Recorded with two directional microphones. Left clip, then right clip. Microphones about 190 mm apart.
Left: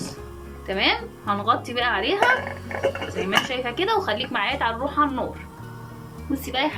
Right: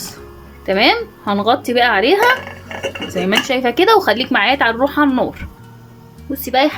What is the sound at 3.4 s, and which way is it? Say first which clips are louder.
A woman's voice: right 11 dB; 55° right (ahead or behind).